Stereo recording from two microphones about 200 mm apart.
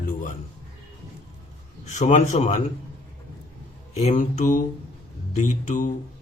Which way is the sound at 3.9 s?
35° left (ahead or behind).